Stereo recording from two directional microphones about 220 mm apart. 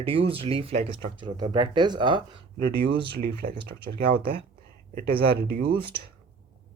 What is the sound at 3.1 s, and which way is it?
Speech, 45° right (ahead or behind).